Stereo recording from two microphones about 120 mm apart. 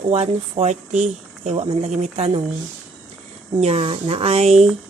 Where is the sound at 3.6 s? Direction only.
60° right (ahead or behind).